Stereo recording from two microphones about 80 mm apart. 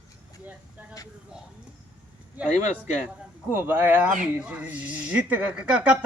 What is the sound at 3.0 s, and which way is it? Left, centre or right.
Speech, right.